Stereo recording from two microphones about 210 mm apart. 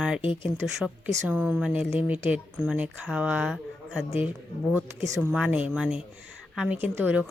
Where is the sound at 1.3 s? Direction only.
5° right (ahead or behind).